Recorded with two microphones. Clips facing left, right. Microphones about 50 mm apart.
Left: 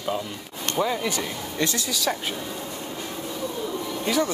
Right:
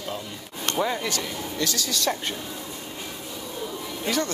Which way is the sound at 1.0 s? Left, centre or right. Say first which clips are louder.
Left 1 dB; centre.